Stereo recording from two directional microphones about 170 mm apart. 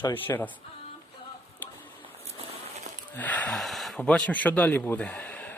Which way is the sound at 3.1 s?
10° left (ahead or behind).